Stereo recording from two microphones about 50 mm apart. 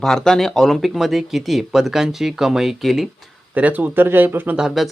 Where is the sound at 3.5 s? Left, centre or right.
Right.